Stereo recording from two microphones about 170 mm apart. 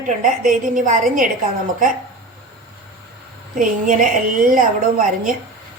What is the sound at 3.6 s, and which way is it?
A woman's voice, 50° right (ahead or behind).